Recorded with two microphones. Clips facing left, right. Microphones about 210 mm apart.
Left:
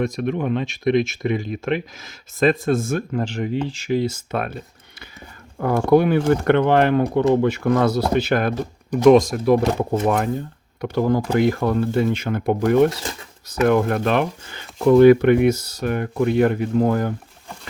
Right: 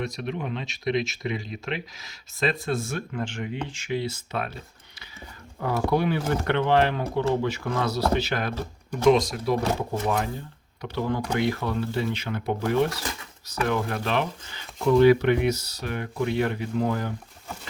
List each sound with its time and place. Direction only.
0.0 s speech: 50° left (ahead or behind)
10.8 s speech: 50° left (ahead or behind)
12.9 s speech: 25° left (ahead or behind)
13.7 s speech: 55° left (ahead or behind)